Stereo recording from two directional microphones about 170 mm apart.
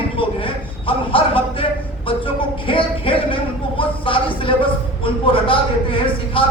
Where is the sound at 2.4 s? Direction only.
30° left (ahead or behind).